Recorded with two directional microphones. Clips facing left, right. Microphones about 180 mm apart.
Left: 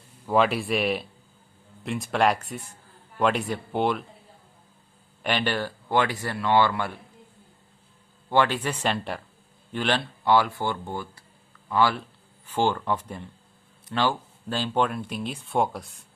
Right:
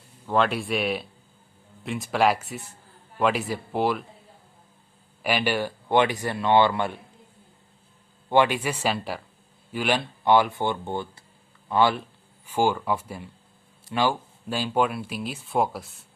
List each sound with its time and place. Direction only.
0.3 s speech: 5° left (ahead or behind)
5.2 s speech: 10° right (ahead or behind)
8.3 s speech: 15° right (ahead or behind)
10.2 s speech: 20° right (ahead or behind); by 16.0 s centre (ahead or behind)